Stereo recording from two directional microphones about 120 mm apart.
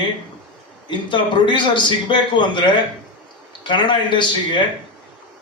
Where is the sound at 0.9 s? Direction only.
40° left (ahead or behind).